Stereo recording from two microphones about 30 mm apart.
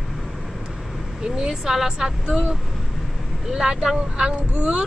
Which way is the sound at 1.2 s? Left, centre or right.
Right.